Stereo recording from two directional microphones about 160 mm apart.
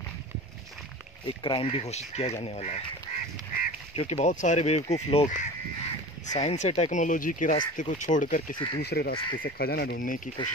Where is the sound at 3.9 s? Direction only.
45° left (ahead or behind).